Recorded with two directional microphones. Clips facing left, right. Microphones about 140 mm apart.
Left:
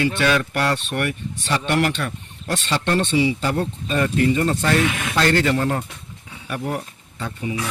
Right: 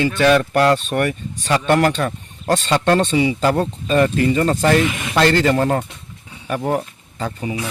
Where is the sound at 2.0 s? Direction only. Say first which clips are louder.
Right 6 dB; 90° right.